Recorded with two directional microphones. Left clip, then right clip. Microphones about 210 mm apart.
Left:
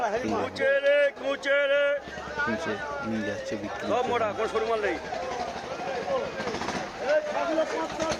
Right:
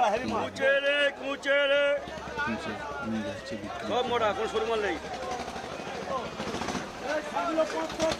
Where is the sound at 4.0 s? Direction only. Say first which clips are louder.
Even; 15° right (ahead or behind).